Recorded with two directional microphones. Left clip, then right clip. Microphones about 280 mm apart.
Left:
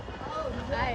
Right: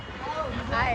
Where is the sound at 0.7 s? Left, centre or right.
Left.